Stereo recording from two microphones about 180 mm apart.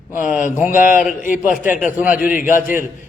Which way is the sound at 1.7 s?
10° right (ahead or behind).